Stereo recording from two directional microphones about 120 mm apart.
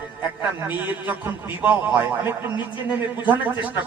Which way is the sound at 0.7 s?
15° right (ahead or behind).